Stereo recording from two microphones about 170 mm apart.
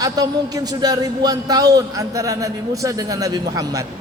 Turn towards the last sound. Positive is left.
turn(degrees=-20)  # may be behind; listen again after turning